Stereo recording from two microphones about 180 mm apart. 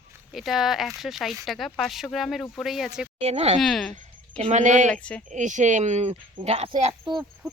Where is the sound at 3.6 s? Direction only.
Centre (ahead or behind).